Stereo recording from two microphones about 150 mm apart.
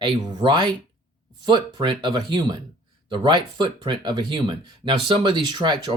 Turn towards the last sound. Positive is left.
turn(degrees=-30)  # may be behind; listen again after turning